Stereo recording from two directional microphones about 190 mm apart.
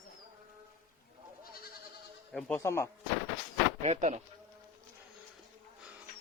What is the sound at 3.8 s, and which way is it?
Speech, 35° right (ahead or behind).